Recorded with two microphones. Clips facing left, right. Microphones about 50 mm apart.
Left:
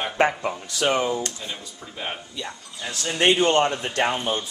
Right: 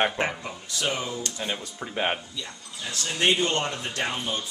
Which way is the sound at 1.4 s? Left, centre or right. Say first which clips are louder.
Right 4 dB; right.